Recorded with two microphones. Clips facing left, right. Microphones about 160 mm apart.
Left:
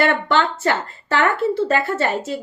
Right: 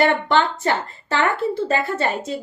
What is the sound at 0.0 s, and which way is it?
Speech, 20° right (ahead or behind).